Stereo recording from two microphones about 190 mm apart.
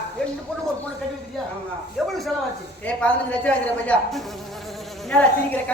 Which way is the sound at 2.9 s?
5° left (ahead or behind).